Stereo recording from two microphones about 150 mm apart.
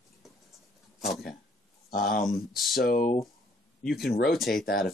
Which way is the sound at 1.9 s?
80° left.